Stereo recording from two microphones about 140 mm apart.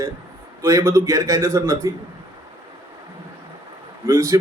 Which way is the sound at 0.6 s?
20° right (ahead or behind).